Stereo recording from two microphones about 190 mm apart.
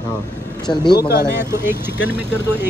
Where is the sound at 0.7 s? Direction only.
20° left (ahead or behind).